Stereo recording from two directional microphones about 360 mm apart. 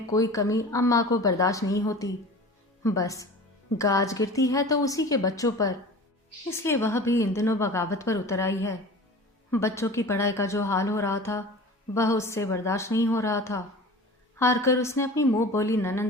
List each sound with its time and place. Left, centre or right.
0.1 s a woman's voice: centre